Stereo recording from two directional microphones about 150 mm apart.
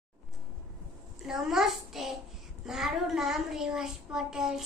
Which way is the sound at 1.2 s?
5° right (ahead or behind).